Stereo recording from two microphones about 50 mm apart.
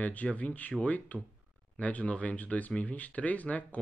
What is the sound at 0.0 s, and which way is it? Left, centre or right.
Speech, left.